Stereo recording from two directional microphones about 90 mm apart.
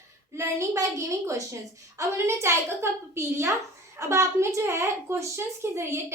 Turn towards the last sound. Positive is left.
turn(degrees=-30)  # may be behind; listen again after turning